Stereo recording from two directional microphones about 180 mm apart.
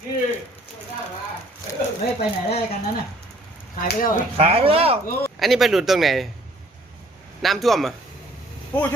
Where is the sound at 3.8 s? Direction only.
50° left (ahead or behind).